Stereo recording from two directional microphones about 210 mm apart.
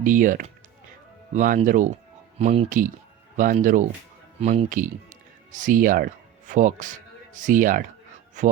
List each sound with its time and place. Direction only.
0.0 s speech: 40° right (ahead or behind)